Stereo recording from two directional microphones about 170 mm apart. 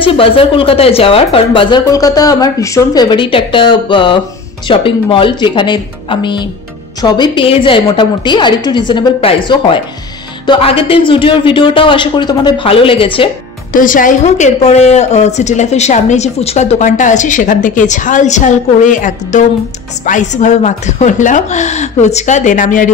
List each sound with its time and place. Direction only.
0.0 s speech: 30° left (ahead or behind)
13.7 s a woman's voice: 50° left (ahead or behind)